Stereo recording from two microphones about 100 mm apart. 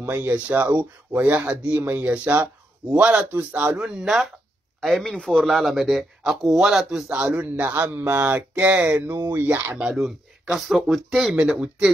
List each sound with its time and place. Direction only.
0.0 s a man's voice: 20° right (ahead or behind)
9.8 s speech: 5° right (ahead or behind)